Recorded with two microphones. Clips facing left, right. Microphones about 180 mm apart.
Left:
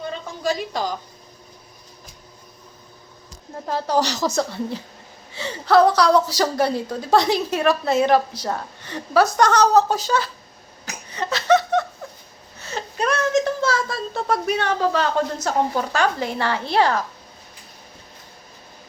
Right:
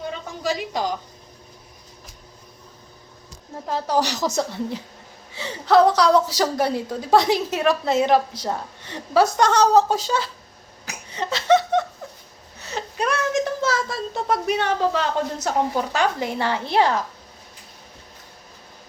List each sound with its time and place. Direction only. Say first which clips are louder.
0.4 s a woman's voice: left 1 dB; 15° right (ahead or behind)
3.7 s a woman's voice: left 1 dB; 15° right (ahead or behind)
11.1 s a sound: even; 25° right (ahead or behind)
12.5 s speech: left 1 dB; 15° right (ahead or behind)